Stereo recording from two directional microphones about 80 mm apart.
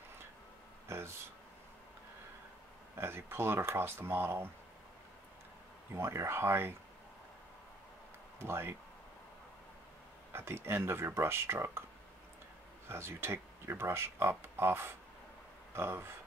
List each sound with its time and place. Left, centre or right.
0.8 s a sound: right
3.0 s speech: right
5.9 s speech: right
8.4 s speech: right
10.3 s speech: right
12.8 s speech: right